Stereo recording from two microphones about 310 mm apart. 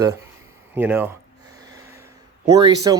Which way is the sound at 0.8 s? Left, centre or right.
Centre.